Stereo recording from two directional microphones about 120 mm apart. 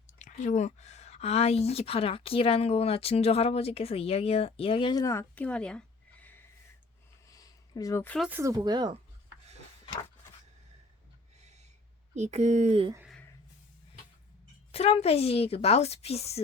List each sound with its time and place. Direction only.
0.1 s speech: 85° left; by 5.0 s 40° left (ahead or behind)
5.3 s a sound: 10° left (ahead or behind)
7.3 s a sound: 30° left (ahead or behind)
8.3 s speech: 20° right (ahead or behind)
8.5 s speech: 35° right (ahead or behind)
12.1 s speech: 70° right (ahead or behind)
14.7 s speech: 60° left (ahead or behind)